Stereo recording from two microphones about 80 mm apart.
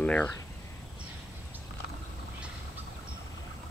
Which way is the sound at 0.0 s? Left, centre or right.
Centre.